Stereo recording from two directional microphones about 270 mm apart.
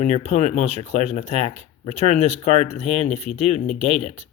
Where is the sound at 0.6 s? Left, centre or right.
Right.